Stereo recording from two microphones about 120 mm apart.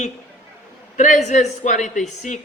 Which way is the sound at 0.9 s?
90° left.